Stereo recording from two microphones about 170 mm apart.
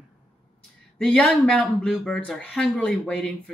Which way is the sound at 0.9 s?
5° left (ahead or behind).